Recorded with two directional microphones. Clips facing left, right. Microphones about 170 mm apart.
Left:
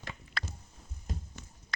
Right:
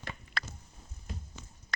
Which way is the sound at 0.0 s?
55° right (ahead or behind).